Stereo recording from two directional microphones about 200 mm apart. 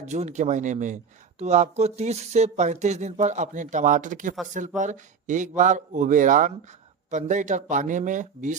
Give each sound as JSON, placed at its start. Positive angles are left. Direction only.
{"t": 0.0, "sound": "speech", "side_deg": -35}